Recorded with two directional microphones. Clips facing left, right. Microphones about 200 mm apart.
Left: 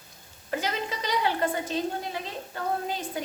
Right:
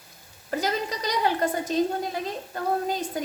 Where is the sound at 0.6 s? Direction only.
40° right (ahead or behind).